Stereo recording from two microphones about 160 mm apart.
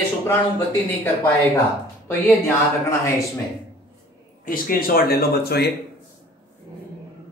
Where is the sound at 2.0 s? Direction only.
15° left (ahead or behind).